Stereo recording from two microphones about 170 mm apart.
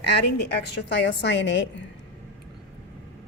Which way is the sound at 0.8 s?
90° left.